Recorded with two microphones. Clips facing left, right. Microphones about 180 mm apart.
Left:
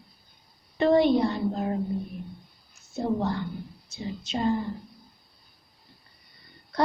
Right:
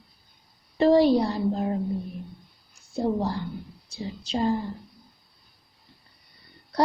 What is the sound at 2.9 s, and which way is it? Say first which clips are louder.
A woman's voice: right 1 dB; 30° right (ahead or behind).